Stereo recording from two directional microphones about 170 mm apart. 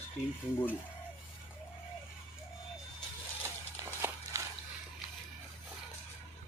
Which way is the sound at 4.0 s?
15° right (ahead or behind).